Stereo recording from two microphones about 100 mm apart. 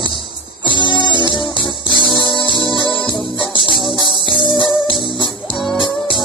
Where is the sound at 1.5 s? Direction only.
50° right (ahead or behind).